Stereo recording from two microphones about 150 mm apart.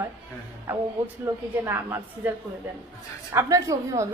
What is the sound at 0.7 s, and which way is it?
A woman's voice, 10° right (ahead or behind).